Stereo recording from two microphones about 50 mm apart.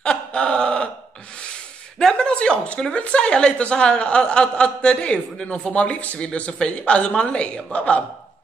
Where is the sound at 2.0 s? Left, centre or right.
Centre.